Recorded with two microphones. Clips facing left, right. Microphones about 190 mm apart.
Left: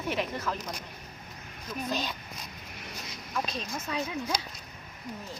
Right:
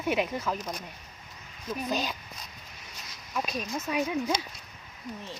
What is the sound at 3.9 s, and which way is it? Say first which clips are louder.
Speech: right 4 dB; 15° right (ahead or behind).